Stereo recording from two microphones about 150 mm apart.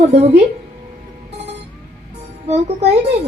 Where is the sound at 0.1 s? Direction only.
45° right (ahead or behind).